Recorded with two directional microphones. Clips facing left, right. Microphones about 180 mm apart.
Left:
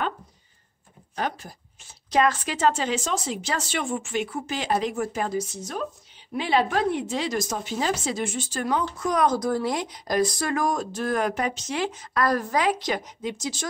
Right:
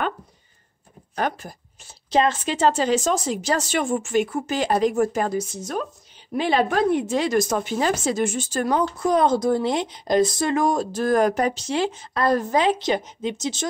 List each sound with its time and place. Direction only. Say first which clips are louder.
1.1 s speech: right 4 dB; 55° right (ahead or behind)
2.0 s a woman's voice: right 2 dB; 25° right (ahead or behind)